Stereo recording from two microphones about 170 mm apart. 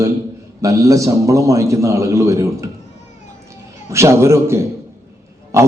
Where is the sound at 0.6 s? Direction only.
20° right (ahead or behind).